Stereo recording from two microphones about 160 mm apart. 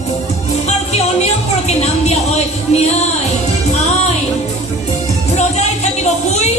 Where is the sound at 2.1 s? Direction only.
40° left (ahead or behind).